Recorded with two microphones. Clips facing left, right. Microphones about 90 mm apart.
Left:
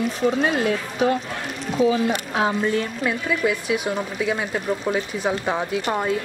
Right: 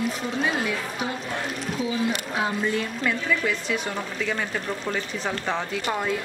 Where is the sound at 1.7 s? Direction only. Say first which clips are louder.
Left 8 dB; 45° left (ahead or behind).